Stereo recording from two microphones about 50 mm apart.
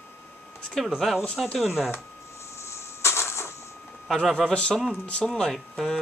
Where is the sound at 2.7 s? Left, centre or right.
Left.